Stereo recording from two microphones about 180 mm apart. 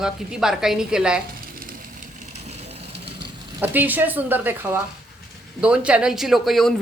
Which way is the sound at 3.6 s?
10° right (ahead or behind).